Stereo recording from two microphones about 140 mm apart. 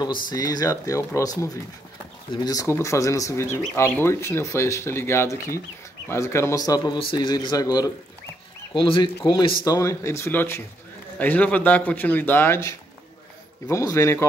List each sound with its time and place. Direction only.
0.0 s speech: 30° left (ahead or behind)
8.7 s speech: 35° left (ahead or behind)
9.7 s speech: 20° left (ahead or behind)